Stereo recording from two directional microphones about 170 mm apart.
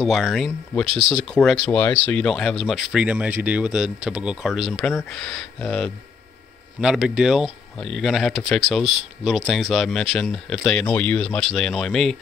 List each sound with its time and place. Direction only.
0.0 s speech: centre (ahead or behind)
0.8 s speech: 30° right (ahead or behind)
1.1 s speech: 5° left (ahead or behind)